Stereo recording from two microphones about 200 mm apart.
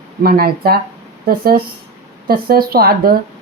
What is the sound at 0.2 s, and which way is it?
Speech, 50° right (ahead or behind).